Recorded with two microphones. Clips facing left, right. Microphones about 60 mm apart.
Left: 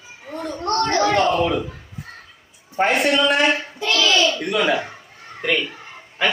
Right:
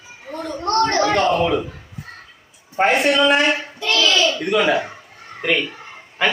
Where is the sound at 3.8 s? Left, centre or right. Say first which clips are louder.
Even; left.